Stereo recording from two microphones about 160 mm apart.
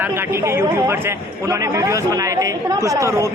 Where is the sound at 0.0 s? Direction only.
15° right (ahead or behind).